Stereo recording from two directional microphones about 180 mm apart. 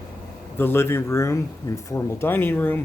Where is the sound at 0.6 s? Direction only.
15° left (ahead or behind).